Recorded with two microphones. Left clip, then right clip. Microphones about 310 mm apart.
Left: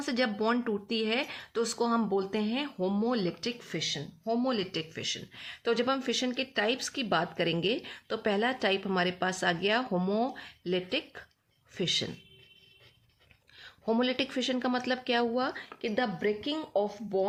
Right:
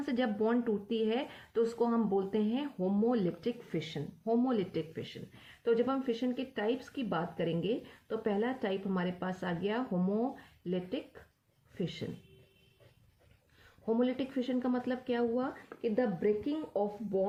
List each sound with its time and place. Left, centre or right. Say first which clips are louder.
0.0 s speech: left 3 dB; left
13.8 s speech: left 3 dB; left